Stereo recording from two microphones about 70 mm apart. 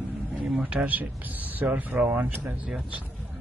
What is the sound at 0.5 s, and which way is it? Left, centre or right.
Speech, centre.